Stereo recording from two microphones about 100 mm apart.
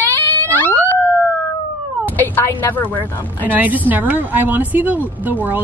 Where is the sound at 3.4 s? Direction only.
20° right (ahead or behind).